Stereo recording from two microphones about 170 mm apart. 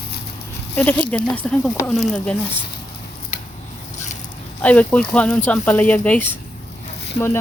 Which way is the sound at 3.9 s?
45° left (ahead or behind).